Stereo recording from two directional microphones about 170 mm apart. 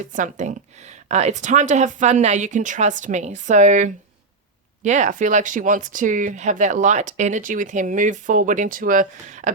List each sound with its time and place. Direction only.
0.1 s speech: 45° right (ahead or behind)